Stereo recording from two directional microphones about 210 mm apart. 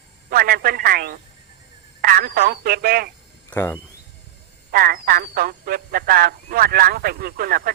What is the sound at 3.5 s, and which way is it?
Speech, 10° left (ahead or behind).